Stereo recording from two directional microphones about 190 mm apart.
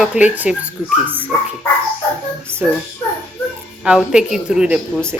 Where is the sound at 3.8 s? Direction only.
5° right (ahead or behind).